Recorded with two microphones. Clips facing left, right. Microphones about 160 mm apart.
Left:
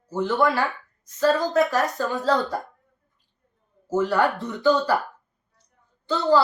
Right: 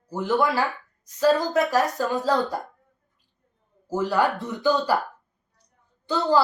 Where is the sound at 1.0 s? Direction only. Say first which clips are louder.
Right 1 dB; 15° right (ahead or behind).